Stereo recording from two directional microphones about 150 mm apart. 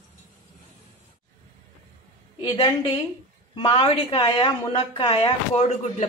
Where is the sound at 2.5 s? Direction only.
35° left (ahead or behind).